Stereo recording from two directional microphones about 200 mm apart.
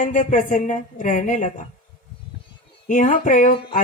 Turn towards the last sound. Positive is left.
turn(degrees=40)  # may be behind; listen again after turning